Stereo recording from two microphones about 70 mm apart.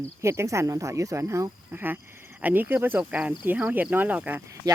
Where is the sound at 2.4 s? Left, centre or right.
Right.